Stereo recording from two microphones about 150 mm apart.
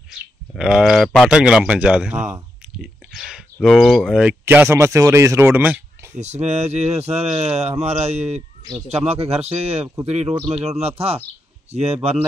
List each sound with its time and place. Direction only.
0.1 s speech: 5° right (ahead or behind)
2.8 s a sound: 5° right (ahead or behind)
3.5 s speech: centre (ahead or behind); by 5.8 s 15° right (ahead or behind)
6.1 s speech: 50° right (ahead or behind)